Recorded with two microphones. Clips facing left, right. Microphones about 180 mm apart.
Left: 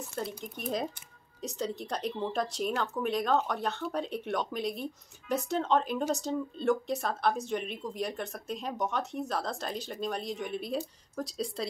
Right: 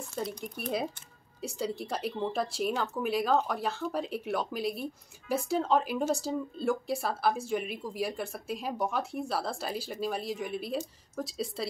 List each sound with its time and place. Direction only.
0.1 s speech: 5° left (ahead or behind)